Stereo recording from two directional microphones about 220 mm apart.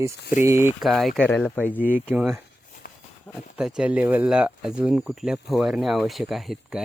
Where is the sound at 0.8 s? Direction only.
Centre (ahead or behind).